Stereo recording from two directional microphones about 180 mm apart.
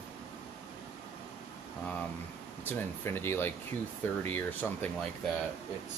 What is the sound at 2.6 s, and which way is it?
Speech, 10° left (ahead or behind).